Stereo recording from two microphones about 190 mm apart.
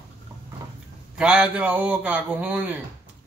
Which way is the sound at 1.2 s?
5° right (ahead or behind).